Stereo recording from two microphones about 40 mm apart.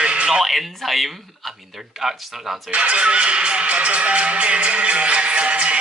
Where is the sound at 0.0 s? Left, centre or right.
Right.